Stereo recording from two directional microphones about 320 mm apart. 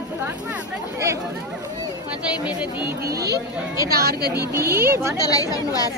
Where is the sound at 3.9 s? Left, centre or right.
Right.